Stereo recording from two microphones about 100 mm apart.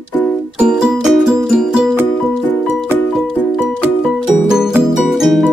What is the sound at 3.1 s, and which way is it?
Music, 5° right (ahead or behind).